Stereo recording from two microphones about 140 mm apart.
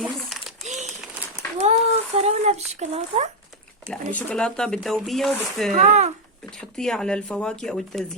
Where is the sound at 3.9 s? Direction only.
10° left (ahead or behind).